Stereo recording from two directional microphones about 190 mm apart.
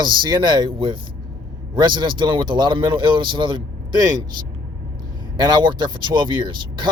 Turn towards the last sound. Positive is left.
turn(degrees=-25)  # may be behind; listen again after turning